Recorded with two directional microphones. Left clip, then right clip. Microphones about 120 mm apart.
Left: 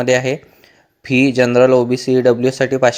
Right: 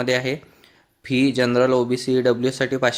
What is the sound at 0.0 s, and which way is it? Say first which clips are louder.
Speech: left 7 dB; 35° left (ahead or behind).